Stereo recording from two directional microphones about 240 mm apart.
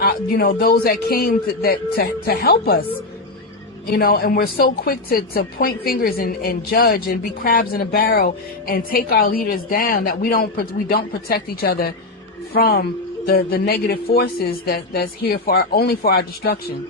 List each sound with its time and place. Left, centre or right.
0.0 s a woman's voice: left
3.9 s a woman's voice: left